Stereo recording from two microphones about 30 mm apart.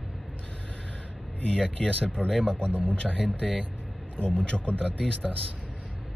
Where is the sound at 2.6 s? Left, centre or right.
Right.